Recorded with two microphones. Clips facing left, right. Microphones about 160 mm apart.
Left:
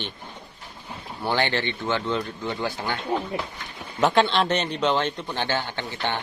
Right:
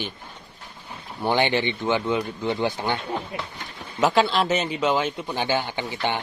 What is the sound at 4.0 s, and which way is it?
A man's voice, 5° right (ahead or behind).